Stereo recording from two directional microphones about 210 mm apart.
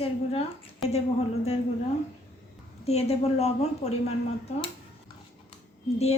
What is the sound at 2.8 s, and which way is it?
A woman's voice, 30° left (ahead or behind).